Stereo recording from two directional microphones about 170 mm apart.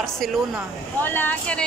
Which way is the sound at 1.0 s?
10° left (ahead or behind).